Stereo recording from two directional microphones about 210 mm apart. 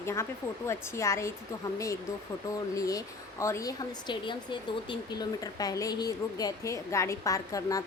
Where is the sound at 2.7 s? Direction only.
15° left (ahead or behind).